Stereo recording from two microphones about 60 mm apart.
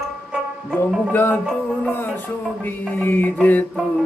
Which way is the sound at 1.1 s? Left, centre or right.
Left.